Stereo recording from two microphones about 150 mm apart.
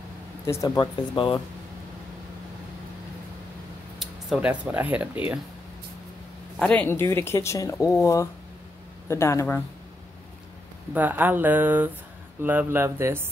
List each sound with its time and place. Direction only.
0.5 s speech: 20° left (ahead or behind)
1.1 s speech: 35° left (ahead or behind)
4.0 s speech: 5° right (ahead or behind)
6.6 s speech: 10° left (ahead or behind)
11.0 s speech: 10° right (ahead or behind)